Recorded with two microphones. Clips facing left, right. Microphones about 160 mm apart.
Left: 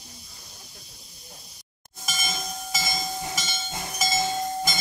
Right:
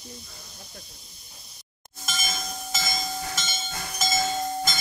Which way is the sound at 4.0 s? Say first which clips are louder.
Even; 10° left (ahead or behind).